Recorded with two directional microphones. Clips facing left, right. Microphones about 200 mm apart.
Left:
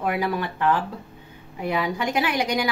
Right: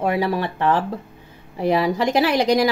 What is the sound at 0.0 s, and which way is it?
A woman's voice, 25° right (ahead or behind).